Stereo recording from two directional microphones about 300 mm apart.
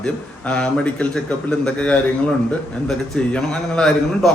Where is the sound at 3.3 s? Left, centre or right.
Centre.